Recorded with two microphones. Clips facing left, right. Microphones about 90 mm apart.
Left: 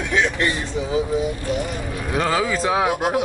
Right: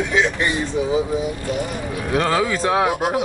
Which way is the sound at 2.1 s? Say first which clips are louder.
Right 2 dB; centre (ahead or behind).